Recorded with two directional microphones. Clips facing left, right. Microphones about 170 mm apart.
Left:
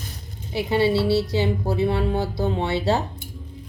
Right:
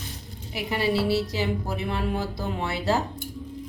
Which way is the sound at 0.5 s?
25° left (ahead or behind).